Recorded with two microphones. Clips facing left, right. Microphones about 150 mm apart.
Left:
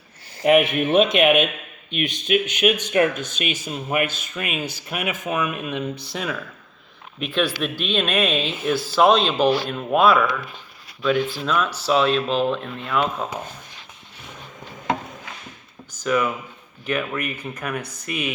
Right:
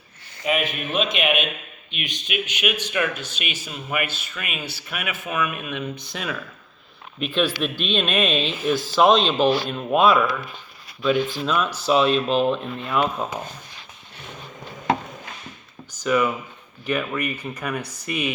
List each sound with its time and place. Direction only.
0.4 s speech: 70° left (ahead or behind)
1.1 s speech: 40° left (ahead or behind)
7.2 s speech: 15° left (ahead or behind)
9.6 s speech: 20° right (ahead or behind)
11.4 s speech: 10° right (ahead or behind)
16.0 s speech: centre (ahead or behind)
17.3 s speech: 15° right (ahead or behind)
17.6 s speech: centre (ahead or behind)